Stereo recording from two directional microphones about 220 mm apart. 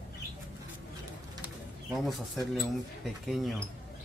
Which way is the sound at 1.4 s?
Centre (ahead or behind).